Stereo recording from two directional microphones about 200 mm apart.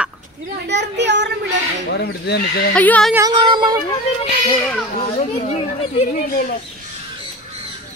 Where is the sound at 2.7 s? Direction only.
5° left (ahead or behind).